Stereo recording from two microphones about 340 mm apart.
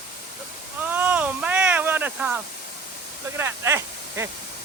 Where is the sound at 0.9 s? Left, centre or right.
Centre.